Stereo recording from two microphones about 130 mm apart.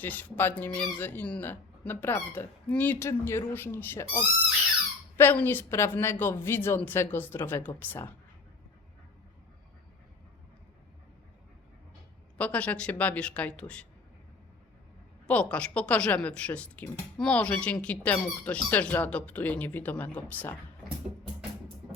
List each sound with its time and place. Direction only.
0.0 s a woman's voice: 15° left (ahead or behind)
12.4 s a woman's voice: 10° left (ahead or behind)
15.3 s a woman's voice: 10° left (ahead or behind)